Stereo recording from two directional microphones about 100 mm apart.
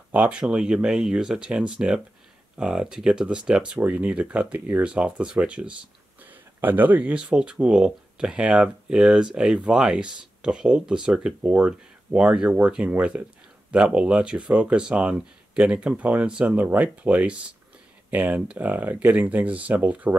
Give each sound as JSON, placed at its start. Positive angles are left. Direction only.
{"t": 0.1, "sound": "speech", "side_deg": -15}